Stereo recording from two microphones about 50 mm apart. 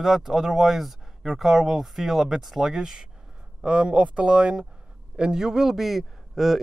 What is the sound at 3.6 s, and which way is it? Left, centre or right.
A man's voice, right.